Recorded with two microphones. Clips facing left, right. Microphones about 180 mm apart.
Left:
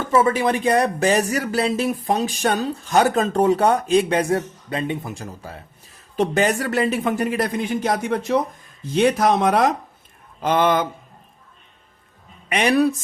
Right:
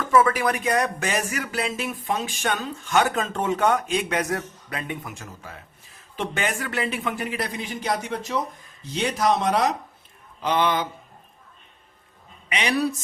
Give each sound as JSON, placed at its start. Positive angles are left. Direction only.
{"t": 0.0, "sound": "speech", "side_deg": 25}
{"t": 12.5, "sound": "speech", "side_deg": 50}